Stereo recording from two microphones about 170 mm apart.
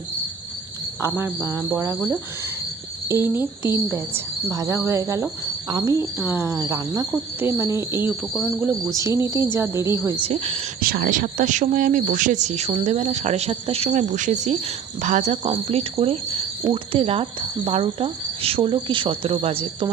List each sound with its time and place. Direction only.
1.0 s speech: 15° right (ahead or behind)
5.7 s cricket: 20° right (ahead or behind)
7.3 s speech: 15° right (ahead or behind)
8.3 s speech: 5° left (ahead or behind)
9.0 s speech: 15° right (ahead or behind)
10.2 s speech: 35° right (ahead or behind)
10.8 s speech: 60° right (ahead or behind); by 19.9 s 35° right (ahead or behind)